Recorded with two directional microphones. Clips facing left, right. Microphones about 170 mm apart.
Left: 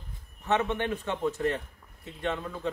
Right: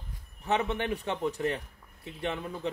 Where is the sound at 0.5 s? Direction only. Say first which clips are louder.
Left 1 dB; 15° right (ahead or behind).